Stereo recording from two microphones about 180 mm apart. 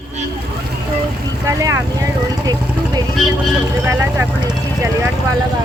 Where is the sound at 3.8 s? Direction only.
10° right (ahead or behind).